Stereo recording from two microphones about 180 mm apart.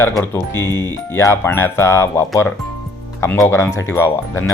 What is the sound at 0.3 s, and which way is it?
A man's voice, 15° left (ahead or behind).